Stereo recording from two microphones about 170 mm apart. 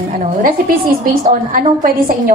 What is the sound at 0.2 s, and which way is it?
A woman's voice, 55° right (ahead or behind).